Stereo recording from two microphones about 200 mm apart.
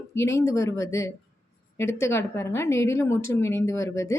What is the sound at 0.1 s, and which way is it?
A woman's voice, 15° left (ahead or behind).